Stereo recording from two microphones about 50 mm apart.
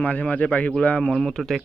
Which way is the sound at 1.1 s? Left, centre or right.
Centre.